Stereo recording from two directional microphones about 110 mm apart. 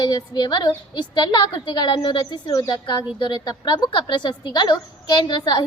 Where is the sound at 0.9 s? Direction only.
40° left (ahead or behind).